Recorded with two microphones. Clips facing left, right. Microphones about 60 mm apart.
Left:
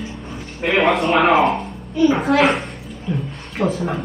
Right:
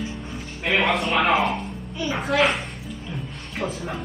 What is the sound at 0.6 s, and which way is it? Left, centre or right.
A man's voice, left.